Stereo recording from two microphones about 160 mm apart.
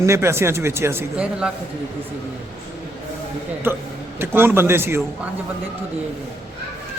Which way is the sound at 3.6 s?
15° right (ahead or behind).